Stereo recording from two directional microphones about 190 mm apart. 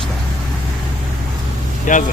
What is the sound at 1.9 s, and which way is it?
Speech, 40° left (ahead or behind).